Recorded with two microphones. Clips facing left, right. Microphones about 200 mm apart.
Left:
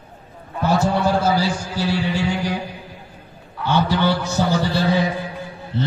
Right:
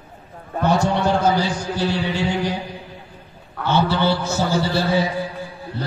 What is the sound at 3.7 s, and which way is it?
A man's voice, 15° left (ahead or behind).